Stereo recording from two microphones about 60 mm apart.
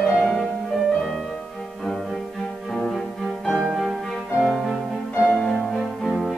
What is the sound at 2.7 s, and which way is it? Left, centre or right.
Music, centre.